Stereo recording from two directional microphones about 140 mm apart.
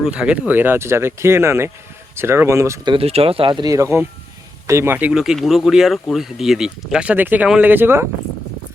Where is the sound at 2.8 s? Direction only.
40° right (ahead or behind); by 8.0 s 15° right (ahead or behind).